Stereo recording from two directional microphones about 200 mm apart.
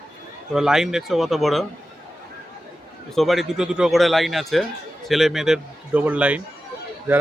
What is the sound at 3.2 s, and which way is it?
A man's voice, centre (ahead or behind).